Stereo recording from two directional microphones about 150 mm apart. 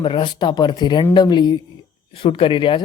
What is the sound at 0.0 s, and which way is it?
Speech, 30° left (ahead or behind).